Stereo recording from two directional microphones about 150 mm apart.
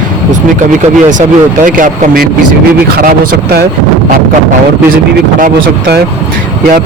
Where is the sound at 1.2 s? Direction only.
65° right (ahead or behind).